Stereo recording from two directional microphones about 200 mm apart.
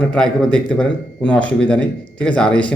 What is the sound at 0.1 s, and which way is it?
A man's voice, 5° left (ahead or behind).